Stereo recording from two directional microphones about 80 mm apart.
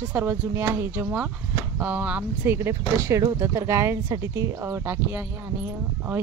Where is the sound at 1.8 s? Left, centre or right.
Centre.